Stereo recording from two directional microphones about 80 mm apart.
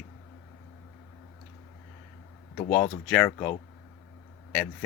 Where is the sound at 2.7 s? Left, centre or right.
Centre.